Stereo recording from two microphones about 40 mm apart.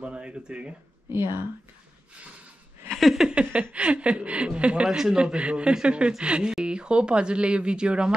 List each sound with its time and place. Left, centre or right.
0.0 s speech: right
1.1 s a woman's voice: right
2.9 s a sound: centre
3.3 s chuckle: right
4.8 s a man's voice: centre
5.2 s speech: right